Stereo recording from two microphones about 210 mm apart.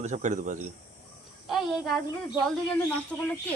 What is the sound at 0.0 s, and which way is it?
Speech, 35° right (ahead or behind).